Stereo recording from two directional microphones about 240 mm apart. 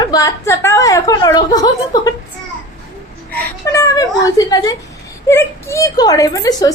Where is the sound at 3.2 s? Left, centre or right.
Centre.